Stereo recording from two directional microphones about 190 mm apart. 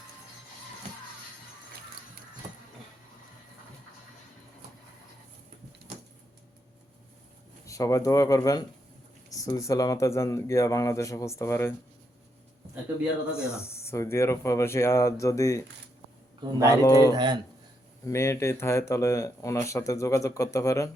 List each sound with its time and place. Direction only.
7.6 s speech: 15° left (ahead or behind)
13.3 s speech: 15° left (ahead or behind)
16.8 s speech: 15° left (ahead or behind)
17.1 s speech: 25° right (ahead or behind)
18.0 s speech: 15° left (ahead or behind)